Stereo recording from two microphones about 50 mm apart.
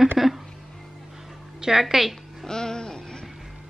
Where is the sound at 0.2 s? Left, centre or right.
Centre.